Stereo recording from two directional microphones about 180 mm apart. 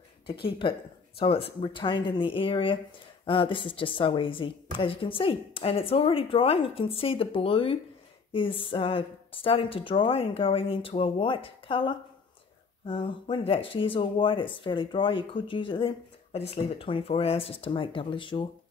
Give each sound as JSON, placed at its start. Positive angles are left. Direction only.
{"t": 0.3, "sound": "a woman's voice", "side_deg": 30}